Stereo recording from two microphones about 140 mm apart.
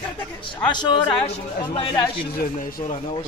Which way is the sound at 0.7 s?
30° left (ahead or behind).